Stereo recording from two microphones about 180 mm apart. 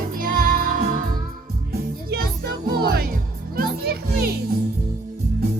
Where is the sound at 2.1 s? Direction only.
60° right (ahead or behind).